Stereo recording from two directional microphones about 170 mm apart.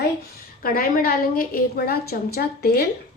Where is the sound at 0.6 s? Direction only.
55° left (ahead or behind).